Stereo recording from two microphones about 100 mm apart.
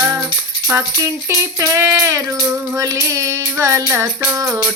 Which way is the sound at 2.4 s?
10° right (ahead or behind).